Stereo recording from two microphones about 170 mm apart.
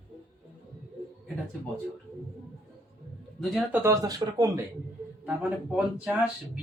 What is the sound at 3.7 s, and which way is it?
Speech, 15° right (ahead or behind).